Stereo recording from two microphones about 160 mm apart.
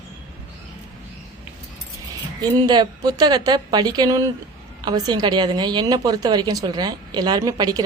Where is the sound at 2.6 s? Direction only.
25° right (ahead or behind).